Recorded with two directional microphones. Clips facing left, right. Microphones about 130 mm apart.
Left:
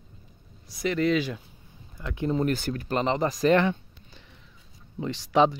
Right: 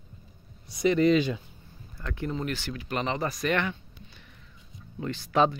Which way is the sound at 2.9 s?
30° left (ahead or behind).